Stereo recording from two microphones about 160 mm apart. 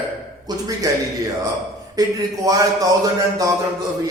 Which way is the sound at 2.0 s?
20° right (ahead or behind).